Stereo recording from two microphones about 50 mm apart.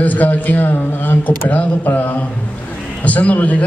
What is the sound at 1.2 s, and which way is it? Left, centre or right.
A man's voice, left.